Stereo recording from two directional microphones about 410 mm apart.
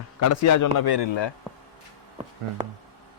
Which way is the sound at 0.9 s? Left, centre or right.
Left.